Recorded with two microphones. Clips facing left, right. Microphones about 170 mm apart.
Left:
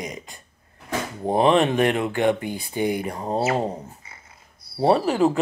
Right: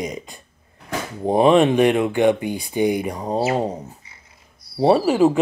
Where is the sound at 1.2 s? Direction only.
15° right (ahead or behind).